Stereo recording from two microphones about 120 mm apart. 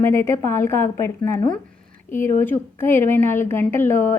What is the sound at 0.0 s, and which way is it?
A woman's voice, 20° left (ahead or behind).